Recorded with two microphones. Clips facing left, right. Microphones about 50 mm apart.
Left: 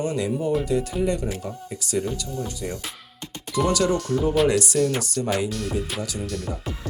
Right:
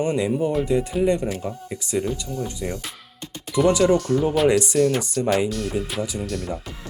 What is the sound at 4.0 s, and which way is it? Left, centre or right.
Speech, centre.